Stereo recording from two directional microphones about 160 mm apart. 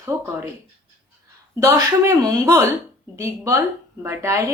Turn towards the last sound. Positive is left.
turn(degrees=-20)  # may be behind; listen again after turning